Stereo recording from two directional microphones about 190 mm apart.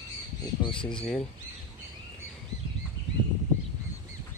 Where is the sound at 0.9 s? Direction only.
Centre (ahead or behind).